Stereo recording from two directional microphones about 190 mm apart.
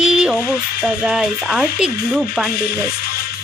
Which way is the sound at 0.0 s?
5° right (ahead or behind).